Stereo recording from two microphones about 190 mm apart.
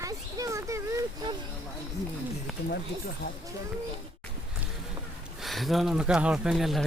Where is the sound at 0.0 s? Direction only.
20° right (ahead or behind).